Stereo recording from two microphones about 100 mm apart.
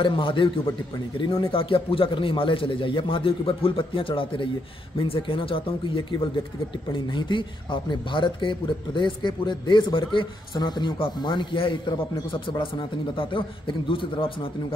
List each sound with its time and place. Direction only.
0.0 s a man's voice: 60° left (ahead or behind)
6.9 s a man's voice: 55° left (ahead or behind)